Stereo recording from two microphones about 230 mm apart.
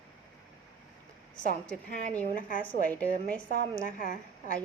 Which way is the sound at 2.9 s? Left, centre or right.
Centre.